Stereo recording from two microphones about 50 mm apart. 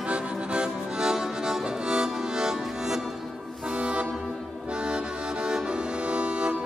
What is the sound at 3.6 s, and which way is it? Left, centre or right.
Accordion, centre.